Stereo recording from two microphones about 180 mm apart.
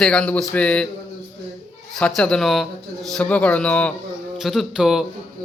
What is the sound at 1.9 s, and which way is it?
A man's voice, 5° left (ahead or behind).